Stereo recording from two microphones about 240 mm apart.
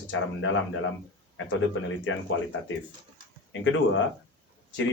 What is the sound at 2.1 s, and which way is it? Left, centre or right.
Speech, left.